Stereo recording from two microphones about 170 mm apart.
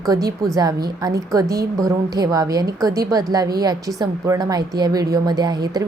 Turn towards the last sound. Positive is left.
turn(degrees=-25)  # may be behind; listen again after turning